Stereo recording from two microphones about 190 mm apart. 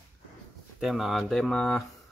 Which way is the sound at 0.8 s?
Centre (ahead or behind).